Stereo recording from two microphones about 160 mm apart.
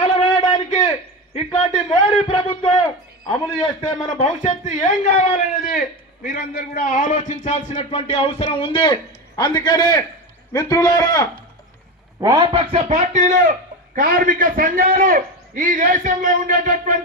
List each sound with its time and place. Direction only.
0.2 s a sound: 30° left (ahead or behind)
1.9 s a man's voice: 30° left (ahead or behind)
4.8 s a man's voice: 45° left (ahead or behind)
6.2 s a man's voice: 65° left (ahead or behind); by 11.4 s 25° left (ahead or behind)
12.2 s a man's voice: 25° right (ahead or behind); by 17.0 s 55° right (ahead or behind)